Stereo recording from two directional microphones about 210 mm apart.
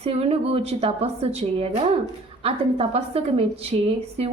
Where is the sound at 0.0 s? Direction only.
30° right (ahead or behind).